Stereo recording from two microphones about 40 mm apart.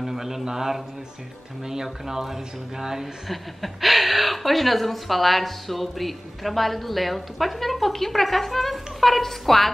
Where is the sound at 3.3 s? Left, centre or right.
Centre.